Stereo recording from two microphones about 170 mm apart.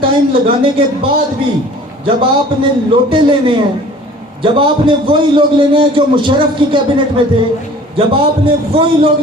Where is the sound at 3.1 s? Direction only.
30° right (ahead or behind).